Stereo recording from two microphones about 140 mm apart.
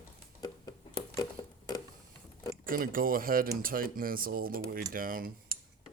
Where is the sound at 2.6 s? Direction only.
90° right.